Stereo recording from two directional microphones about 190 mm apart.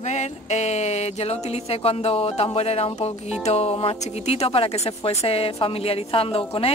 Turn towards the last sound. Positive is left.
turn(degrees=30)  # may be behind; listen again after turning